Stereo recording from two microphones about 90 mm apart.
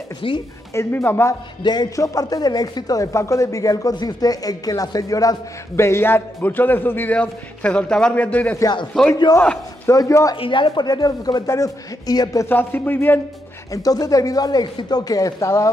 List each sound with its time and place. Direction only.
0.2 s speech: 80° left
0.7 s speech: 25° left (ahead or behind)
1.6 s speech: 50° left (ahead or behind)
2.0 s a man's voice: 40° left (ahead or behind); by 7.2 s 25° left (ahead or behind)
7.2 s a man's voice: 10° left (ahead or behind)
9.0 s a man's voice: centre (ahead or behind)
9.8 s a man's voice: 35° left (ahead or behind)
10.3 s speech: 75° left (ahead or behind)
10.9 s speech: 45° left (ahead or behind)
11.4 s a man's voice: 35° left (ahead or behind)
12.4 s speech: 20° left (ahead or behind)
13.7 s speech: 40° left (ahead or behind)